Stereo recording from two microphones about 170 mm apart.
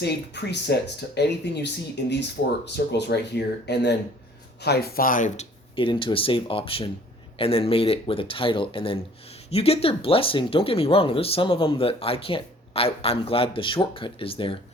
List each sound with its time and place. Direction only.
0.0 s speech: 80° left
4.6 s speech: 70° left (ahead or behind); by 5.5 s 50° left (ahead or behind)
5.7 s speech: 30° left (ahead or behind)